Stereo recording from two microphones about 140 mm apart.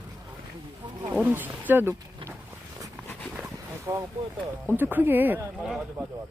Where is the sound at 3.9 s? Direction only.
20° right (ahead or behind).